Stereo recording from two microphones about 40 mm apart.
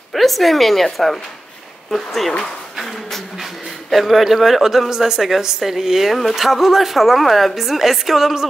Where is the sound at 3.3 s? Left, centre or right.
Centre.